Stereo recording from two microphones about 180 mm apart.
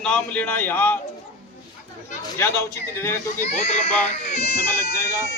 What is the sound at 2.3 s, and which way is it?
A man's voice, 15° left (ahead or behind).